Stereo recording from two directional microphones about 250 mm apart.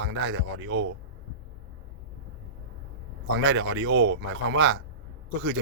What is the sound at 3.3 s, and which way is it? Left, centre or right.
Speech, right.